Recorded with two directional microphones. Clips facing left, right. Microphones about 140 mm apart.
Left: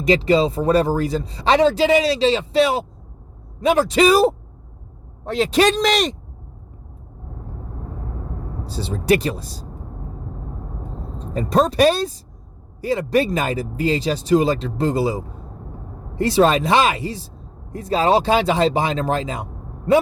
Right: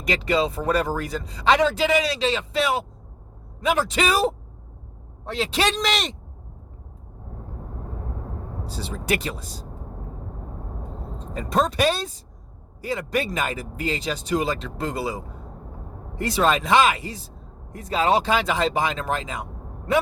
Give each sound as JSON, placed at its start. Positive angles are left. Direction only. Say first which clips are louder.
{"t": 0.0, "sound": "speech", "louder": "left 7 dB", "side_deg": 30}
{"t": 8.6, "sound": "speech", "louder": "left 8 dB", "side_deg": 35}
{"t": 11.3, "sound": "speech", "louder": "left 6 dB", "side_deg": 35}